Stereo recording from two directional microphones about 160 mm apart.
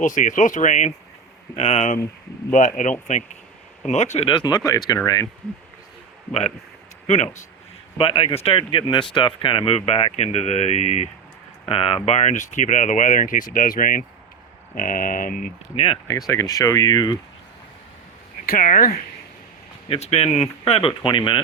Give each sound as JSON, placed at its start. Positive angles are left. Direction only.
{"t": 0.0, "sound": "speech", "side_deg": 50}
{"t": 4.3, "sound": "speech", "side_deg": 30}
{"t": 7.1, "sound": "speech", "side_deg": 45}
{"t": 7.9, "sound": "speech", "side_deg": 35}
{"t": 15.7, "sound": "speech", "side_deg": 35}
{"t": 16.0, "sound": "speech", "side_deg": 20}
{"t": 18.4, "sound": "speech", "side_deg": 60}
{"t": 19.9, "sound": "speech", "side_deg": 40}